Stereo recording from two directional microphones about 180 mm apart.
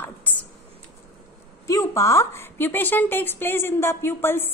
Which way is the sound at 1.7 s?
15° left (ahead or behind).